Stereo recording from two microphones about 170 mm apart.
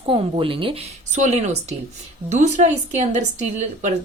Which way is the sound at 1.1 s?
45° right (ahead or behind).